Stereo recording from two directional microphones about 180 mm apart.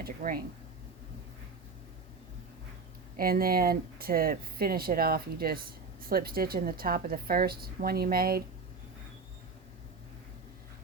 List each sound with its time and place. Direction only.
0.0 s speech: 50° right (ahead or behind)
3.2 s speech: 55° right (ahead or behind)